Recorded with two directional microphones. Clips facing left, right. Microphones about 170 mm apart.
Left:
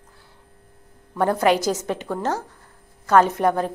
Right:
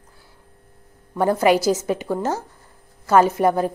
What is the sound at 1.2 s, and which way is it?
A woman's voice, 5° right (ahead or behind).